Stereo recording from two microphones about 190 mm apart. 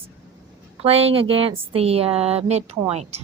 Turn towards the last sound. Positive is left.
turn(degrees=-35)  # may be behind; listen again after turning